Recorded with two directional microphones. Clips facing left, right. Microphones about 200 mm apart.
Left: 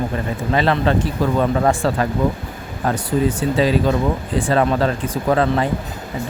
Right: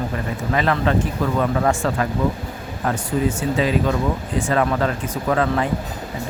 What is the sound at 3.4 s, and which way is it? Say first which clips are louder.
Speech: left 3 dB; 30° left (ahead or behind).